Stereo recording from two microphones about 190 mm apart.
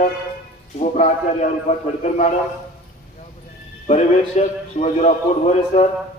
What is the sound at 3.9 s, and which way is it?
A man's voice, 35° left (ahead or behind).